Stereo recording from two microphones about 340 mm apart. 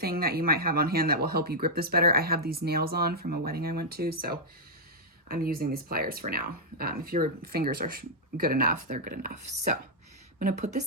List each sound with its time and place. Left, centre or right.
0.0 s speech: right
5.3 s speech: right